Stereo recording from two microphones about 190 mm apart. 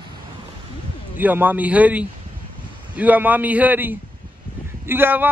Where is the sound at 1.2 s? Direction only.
10° right (ahead or behind).